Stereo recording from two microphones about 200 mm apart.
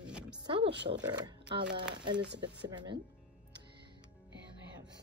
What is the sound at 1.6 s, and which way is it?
Speech, 60° right (ahead or behind).